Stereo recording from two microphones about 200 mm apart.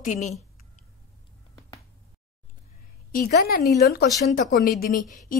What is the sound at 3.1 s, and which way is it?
Speech, 45° left (ahead or behind).